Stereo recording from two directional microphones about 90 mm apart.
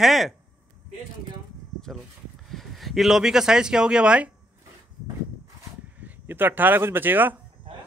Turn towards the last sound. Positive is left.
turn(degrees=-20)  # may be behind; listen again after turning